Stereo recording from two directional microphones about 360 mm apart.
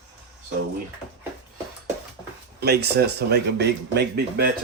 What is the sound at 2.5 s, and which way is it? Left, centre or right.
Speech, right.